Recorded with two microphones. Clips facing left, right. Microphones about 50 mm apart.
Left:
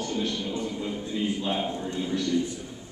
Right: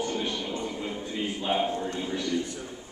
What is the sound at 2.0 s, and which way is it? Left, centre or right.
Speech, centre.